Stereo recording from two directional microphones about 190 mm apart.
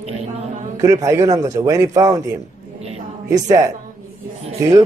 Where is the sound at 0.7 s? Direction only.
15° right (ahead or behind).